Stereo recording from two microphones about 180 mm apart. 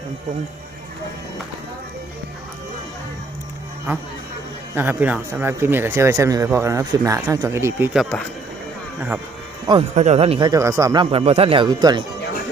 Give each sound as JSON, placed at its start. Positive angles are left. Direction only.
{"t": 4.7, "sound": "speech", "side_deg": -10}
{"t": 9.0, "sound": "speech", "side_deg": -10}
{"t": 9.9, "sound": "speech", "side_deg": -40}
{"t": 10.5, "sound": "speech", "side_deg": -15}